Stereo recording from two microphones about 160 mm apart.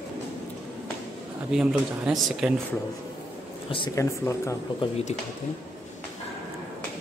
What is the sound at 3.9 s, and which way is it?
Speech, 20° left (ahead or behind).